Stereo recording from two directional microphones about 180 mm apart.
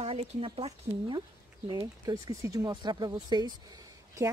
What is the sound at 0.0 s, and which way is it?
Speech, 35° right (ahead or behind).